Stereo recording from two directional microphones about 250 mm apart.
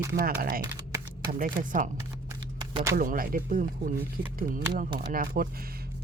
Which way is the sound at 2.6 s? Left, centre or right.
Centre.